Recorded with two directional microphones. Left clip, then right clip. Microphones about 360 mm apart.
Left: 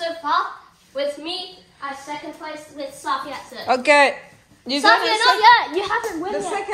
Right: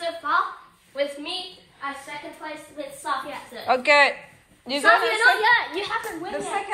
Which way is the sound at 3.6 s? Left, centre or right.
Centre.